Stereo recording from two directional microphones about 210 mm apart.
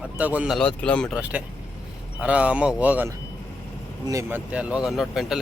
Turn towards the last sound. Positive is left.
turn(degrees=0)  # may be behind; listen again after turning